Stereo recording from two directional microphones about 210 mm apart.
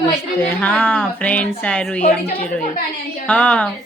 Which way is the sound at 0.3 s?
10° left (ahead or behind).